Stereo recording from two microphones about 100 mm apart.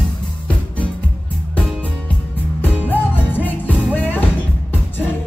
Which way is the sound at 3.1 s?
15° left (ahead or behind).